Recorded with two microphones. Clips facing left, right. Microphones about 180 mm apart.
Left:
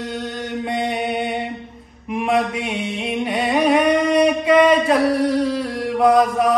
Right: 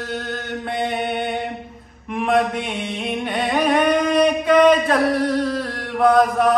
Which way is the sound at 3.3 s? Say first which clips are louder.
Left 2 dB; centre (ahead or behind).